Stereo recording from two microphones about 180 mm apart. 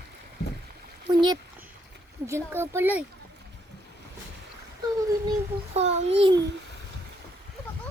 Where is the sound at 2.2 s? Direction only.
15° right (ahead or behind).